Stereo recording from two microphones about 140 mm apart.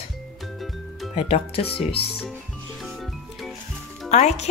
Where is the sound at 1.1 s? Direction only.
45° left (ahead or behind).